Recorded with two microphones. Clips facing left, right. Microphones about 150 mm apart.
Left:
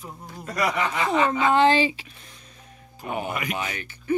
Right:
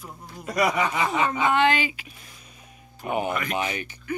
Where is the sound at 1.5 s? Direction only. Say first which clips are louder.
Left 3 dB; 30° left (ahead or behind).